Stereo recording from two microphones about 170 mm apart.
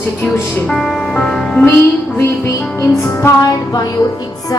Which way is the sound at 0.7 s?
Centre (ahead or behind).